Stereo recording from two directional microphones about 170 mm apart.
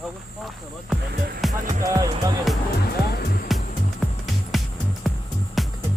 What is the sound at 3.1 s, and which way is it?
Music, 65° left (ahead or behind).